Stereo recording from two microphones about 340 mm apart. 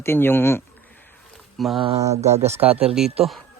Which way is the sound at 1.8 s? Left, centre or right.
Centre.